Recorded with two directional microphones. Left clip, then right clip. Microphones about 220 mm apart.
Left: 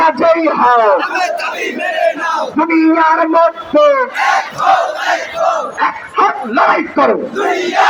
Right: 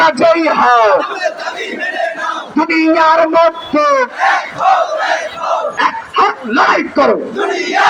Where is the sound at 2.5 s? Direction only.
45° right (ahead or behind).